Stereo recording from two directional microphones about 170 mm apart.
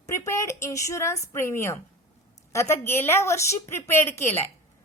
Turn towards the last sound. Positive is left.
turn(degrees=15)  # may be behind; listen again after turning